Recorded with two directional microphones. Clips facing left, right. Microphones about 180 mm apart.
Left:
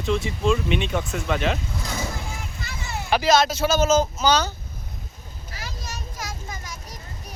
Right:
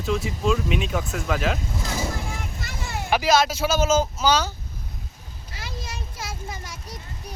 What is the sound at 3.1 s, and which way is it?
Speech, 10° right (ahead or behind).